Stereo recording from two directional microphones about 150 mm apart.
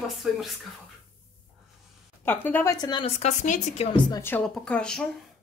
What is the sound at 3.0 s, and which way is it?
Speech, 50° left (ahead or behind).